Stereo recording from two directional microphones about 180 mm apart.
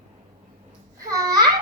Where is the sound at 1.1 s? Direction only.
20° right (ahead or behind).